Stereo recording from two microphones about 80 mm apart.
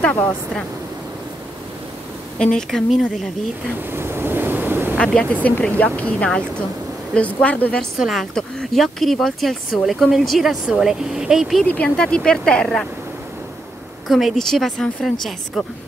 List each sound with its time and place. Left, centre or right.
0.0 s speech: left
2.3 s speech: centre
3.9 s waves: right
4.9 s speech: centre
8.0 s speech: centre
11.6 s speech: centre
14.0 s speech: centre